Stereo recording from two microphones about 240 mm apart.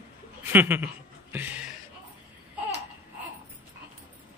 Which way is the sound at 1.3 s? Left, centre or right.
Centre.